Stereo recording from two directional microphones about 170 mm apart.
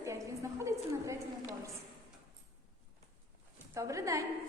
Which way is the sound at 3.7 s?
20° right (ahead or behind).